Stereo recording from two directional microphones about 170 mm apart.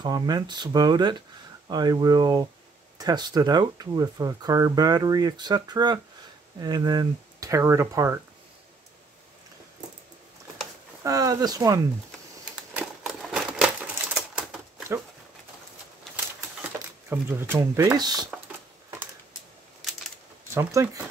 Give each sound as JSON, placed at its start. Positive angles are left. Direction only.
{"t": 0.0, "sound": "speech", "side_deg": -25}
{"t": 11.1, "sound": "speech", "side_deg": -20}
{"t": 12.7, "sound": "typewriter", "side_deg": -5}
{"t": 16.3, "sound": "a sound", "side_deg": -10}
{"t": 20.5, "sound": "speech", "side_deg": -15}